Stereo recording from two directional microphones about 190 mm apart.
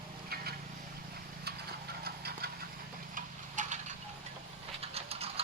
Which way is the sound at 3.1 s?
40° right (ahead or behind).